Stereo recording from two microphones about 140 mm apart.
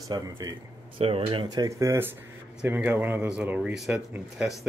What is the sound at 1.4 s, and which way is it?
Speech, 25° right (ahead or behind).